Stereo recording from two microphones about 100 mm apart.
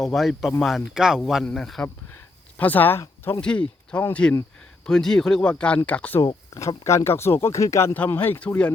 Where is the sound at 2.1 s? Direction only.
15° left (ahead or behind).